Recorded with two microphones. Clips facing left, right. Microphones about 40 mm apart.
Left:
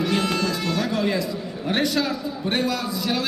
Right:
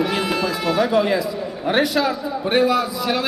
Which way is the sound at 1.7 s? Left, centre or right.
Centre.